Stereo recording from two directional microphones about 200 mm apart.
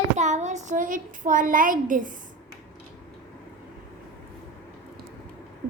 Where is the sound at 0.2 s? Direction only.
35° right (ahead or behind).